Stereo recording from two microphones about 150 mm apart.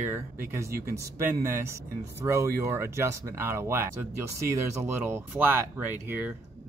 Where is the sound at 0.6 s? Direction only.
80° right.